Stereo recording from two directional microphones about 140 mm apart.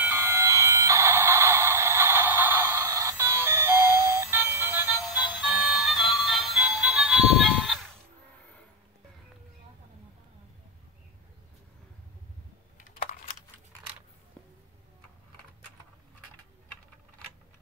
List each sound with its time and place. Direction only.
0.0 s a sound: 15° right (ahead or behind)
5.3 s music: 10° right (ahead or behind)
12.7 s computer keyboard: 65° left (ahead or behind)